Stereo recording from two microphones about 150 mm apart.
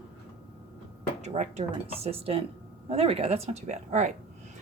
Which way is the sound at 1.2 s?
50° right (ahead or behind).